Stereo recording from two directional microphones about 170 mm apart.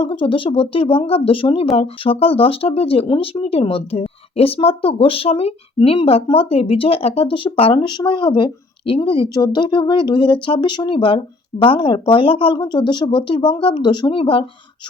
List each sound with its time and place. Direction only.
0.0 s speech: 30° left (ahead or behind)